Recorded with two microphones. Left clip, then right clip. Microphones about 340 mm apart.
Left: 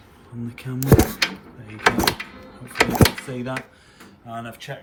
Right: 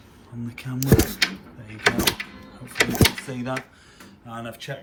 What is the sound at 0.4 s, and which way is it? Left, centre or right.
Speech, centre.